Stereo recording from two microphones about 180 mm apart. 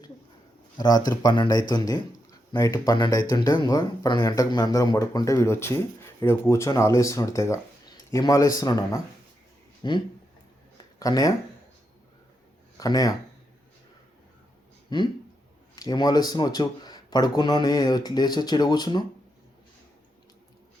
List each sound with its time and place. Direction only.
0.8 s speech: 20° left (ahead or behind)
11.0 s speech: 20° left (ahead or behind)
12.7 s speech: 20° left (ahead or behind)
14.8 s speech: 25° left (ahead or behind)